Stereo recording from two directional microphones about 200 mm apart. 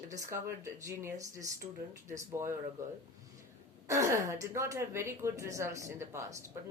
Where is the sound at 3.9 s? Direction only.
15° right (ahead or behind).